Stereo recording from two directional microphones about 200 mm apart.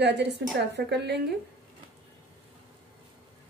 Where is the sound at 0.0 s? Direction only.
60° right (ahead or behind).